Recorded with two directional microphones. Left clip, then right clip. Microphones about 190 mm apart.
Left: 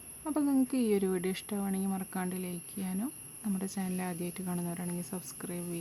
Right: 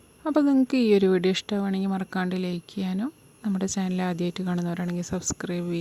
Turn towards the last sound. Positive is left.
turn(degrees=-30)  # may be behind; listen again after turning